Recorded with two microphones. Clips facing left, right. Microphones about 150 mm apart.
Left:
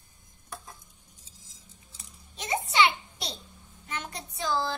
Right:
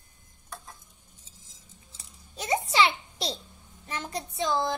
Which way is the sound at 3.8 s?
35° right (ahead or behind).